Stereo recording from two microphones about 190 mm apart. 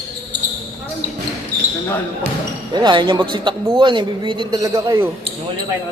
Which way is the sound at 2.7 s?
25° right (ahead or behind).